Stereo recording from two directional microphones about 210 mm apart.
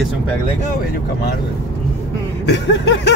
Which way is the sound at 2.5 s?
55° left (ahead or behind).